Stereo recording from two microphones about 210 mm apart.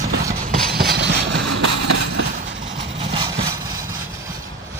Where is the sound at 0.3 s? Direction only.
45° right (ahead or behind).